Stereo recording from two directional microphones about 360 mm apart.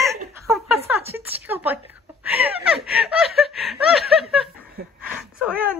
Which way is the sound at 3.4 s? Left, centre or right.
Centre.